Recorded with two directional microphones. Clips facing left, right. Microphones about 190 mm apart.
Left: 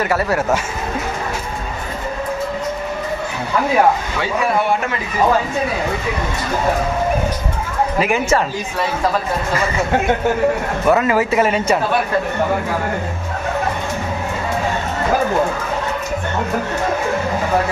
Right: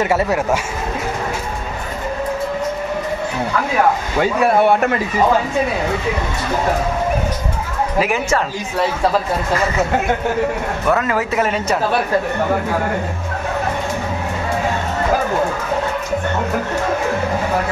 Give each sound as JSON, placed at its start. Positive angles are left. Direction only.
{"t": 0.0, "sound": "speech", "side_deg": -20}
{"t": 4.2, "sound": "a man's voice", "side_deg": -50}
{"t": 8.0, "sound": "speech", "side_deg": 0}
{"t": 10.9, "sound": "speech", "side_deg": 5}